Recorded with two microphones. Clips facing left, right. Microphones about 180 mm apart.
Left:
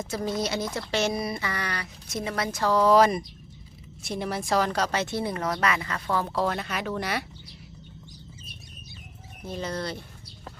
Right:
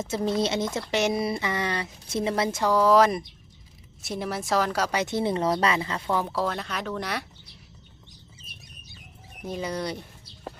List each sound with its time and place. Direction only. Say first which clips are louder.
0.0 s speech: right 3 dB; 25° right (ahead or behind)
2.6 s speech: even; 5° right (ahead or behind); by 6.0 s 25° right (ahead or behind)
6.1 s speech: left 1 dB; 10° right (ahead or behind)
9.4 s speech: right 2 dB; 10° right (ahead or behind)